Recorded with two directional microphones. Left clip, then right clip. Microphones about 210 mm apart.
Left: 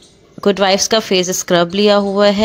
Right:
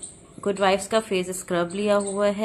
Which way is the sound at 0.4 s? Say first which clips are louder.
Left 9 dB; 40° left (ahead or behind).